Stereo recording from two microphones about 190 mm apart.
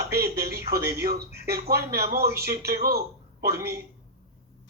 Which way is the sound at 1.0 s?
55° right (ahead or behind).